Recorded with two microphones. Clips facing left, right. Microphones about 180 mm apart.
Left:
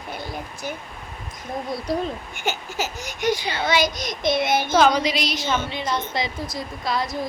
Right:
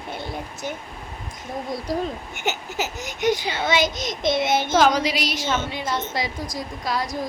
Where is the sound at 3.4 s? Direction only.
5° right (ahead or behind).